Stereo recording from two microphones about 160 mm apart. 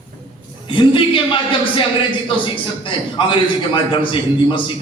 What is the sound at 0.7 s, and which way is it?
A man's voice, 30° left (ahead or behind).